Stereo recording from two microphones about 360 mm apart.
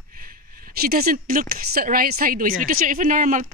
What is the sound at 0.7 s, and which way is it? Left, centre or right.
Speech, right.